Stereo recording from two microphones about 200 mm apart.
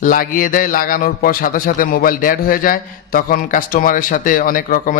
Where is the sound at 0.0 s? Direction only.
45° left (ahead or behind).